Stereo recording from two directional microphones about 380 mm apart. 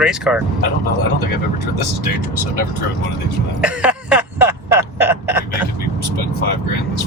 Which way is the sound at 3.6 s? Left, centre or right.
Centre.